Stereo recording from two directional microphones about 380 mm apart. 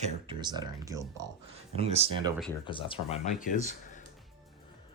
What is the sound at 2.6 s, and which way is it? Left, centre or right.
Speech, centre.